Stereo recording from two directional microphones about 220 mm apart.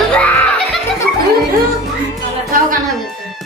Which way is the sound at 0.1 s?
5° left (ahead or behind).